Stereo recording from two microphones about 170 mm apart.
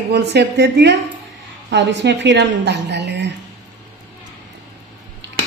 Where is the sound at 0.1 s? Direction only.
75° right (ahead or behind); by 3.3 s 90° right.